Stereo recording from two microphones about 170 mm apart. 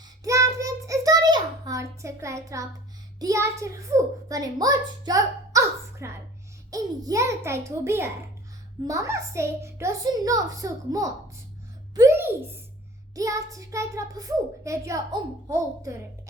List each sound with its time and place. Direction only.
0.3 s child singing: 20° right (ahead or behind)
3.2 s a child's voice: 20° right (ahead or behind)
11.9 s a sound: 15° right (ahead or behind)
13.1 s a child's voice: 20° right (ahead or behind)